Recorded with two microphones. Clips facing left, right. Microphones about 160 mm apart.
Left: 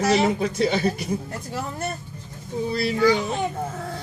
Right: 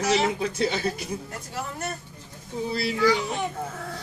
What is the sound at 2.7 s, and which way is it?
Speech, 50° left (ahead or behind).